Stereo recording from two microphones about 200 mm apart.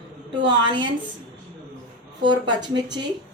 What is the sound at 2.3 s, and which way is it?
Speech, 20° right (ahead or behind).